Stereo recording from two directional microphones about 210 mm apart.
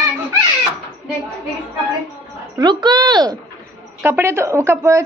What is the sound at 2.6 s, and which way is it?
A woman's voice, 20° right (ahead or behind).